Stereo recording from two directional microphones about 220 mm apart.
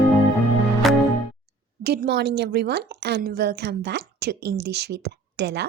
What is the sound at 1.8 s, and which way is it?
A woman's voice, 45° right (ahead or behind).